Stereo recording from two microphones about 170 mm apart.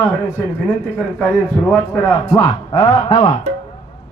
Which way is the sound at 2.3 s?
25° left (ahead or behind).